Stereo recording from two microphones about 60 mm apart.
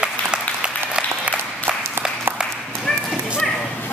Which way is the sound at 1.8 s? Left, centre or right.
Right.